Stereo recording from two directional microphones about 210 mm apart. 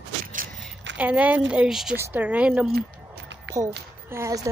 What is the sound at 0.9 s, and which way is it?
Speech, 5° right (ahead or behind).